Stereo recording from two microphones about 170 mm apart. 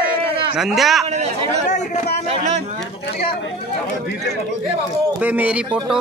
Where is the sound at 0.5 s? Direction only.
Centre (ahead or behind).